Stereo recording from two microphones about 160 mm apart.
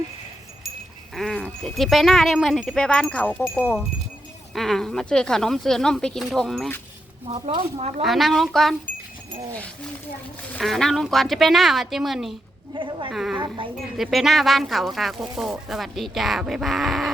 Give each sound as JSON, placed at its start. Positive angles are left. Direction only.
{"t": 1.1, "sound": "speech", "side_deg": 5}
{"t": 7.3, "sound": "speech", "side_deg": -40}
{"t": 8.0, "sound": "speech", "side_deg": 0}
{"t": 10.6, "sound": "speech", "side_deg": 0}
{"t": 12.7, "sound": "speech", "side_deg": -30}
{"t": 13.1, "sound": "speech", "side_deg": -5}
{"t": 13.3, "sound": "speech", "side_deg": -30}
{"t": 13.9, "sound": "speech", "side_deg": 0}